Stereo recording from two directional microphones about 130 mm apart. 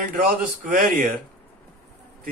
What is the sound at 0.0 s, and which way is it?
Speech, 90° right.